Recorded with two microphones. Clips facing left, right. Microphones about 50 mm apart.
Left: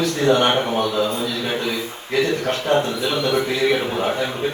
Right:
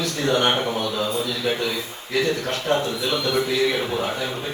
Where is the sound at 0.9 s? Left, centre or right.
Left.